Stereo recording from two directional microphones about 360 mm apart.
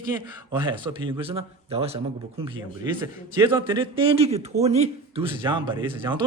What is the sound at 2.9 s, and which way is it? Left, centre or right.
A man's voice, centre.